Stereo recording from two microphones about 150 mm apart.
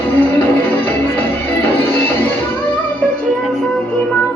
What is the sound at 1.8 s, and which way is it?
Music, 15° left (ahead or behind).